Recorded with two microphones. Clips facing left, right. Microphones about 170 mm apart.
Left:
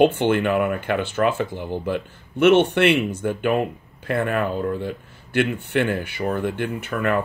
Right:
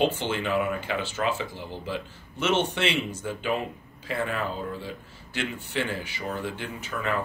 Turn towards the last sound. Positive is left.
turn(degrees=60)  # may be behind; listen again after turning